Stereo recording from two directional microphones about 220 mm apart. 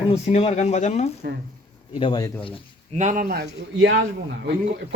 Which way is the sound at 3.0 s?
35° right (ahead or behind).